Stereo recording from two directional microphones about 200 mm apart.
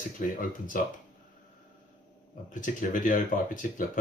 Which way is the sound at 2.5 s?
40° left (ahead or behind).